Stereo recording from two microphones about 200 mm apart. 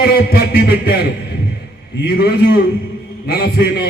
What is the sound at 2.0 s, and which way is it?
Speech, 50° left (ahead or behind).